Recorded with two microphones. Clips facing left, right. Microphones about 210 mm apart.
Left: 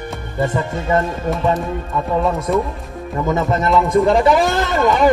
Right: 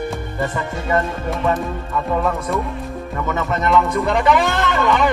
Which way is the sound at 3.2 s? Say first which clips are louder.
Left 4 dB; 35° left (ahead or behind).